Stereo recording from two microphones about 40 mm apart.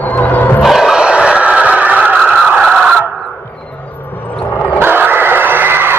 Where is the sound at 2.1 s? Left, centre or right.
Centre.